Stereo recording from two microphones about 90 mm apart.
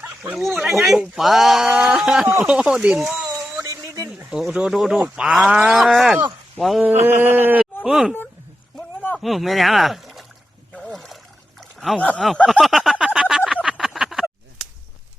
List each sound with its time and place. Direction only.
0.3 s speech: centre (ahead or behind)
3.2 s a sound: 40° right (ahead or behind)
4.3 s speech: 5° right (ahead or behind)
6.8 s a sound: 20° right (ahead or behind)
7.9 s speech: 5° right (ahead or behind)
9.1 s speech: centre (ahead or behind)
10.9 s trickle: centre (ahead or behind)
11.9 s speech: 15° left (ahead or behind)
12.5 s a sound: centre (ahead or behind)